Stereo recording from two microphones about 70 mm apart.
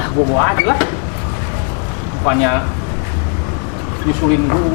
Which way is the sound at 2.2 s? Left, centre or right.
Left.